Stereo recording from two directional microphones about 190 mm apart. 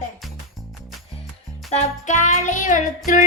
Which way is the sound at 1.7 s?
35° left (ahead or behind).